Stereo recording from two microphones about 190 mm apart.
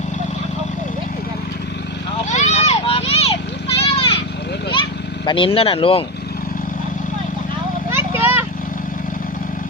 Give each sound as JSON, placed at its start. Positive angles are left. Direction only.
{"t": 2.3, "sound": "children playing", "side_deg": 35}
{"t": 4.7, "sound": "vehicle", "side_deg": 25}
{"t": 7.9, "sound": "vehicle", "side_deg": -10}